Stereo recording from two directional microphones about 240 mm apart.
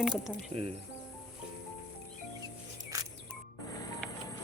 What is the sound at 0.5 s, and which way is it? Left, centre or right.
Speech, right.